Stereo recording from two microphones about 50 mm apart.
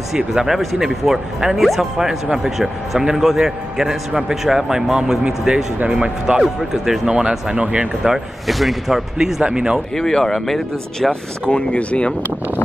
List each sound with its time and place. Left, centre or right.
0.3 s speech: centre
6.4 s speech: centre
8.0 s speech: centre
9.4 s speech: centre
9.9 s speech: centre
11.5 s speech: left